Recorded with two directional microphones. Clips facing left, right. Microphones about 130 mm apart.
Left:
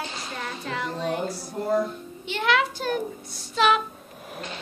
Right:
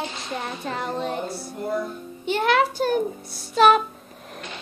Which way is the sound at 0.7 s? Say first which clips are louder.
Right 1 dB; 40° right (ahead or behind).